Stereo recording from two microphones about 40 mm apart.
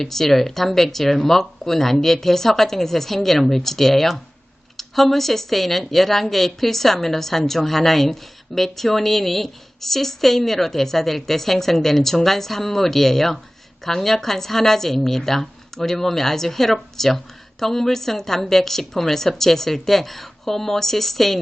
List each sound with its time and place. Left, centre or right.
0.0 s speech: centre